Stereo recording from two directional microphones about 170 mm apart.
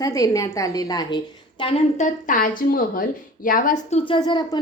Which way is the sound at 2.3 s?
55° left (ahead or behind).